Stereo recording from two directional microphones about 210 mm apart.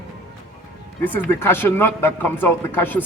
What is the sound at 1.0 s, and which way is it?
Speech, 10° left (ahead or behind).